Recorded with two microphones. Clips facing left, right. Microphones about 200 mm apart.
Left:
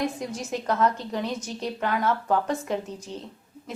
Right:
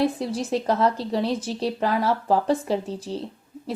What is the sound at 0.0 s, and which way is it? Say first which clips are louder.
A woman's voice: right 5 dB; 35° right (ahead or behind).